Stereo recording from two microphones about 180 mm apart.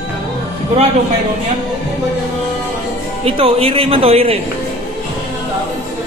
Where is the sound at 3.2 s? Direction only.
30° right (ahead or behind).